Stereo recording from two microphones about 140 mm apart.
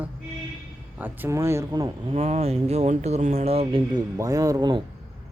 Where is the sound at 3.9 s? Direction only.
25° right (ahead or behind).